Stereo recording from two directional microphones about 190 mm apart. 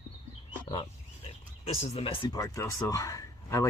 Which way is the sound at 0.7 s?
30° left (ahead or behind).